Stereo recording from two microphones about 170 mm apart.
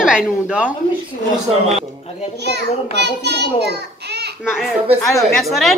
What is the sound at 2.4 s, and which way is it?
A child's voice, 80° right.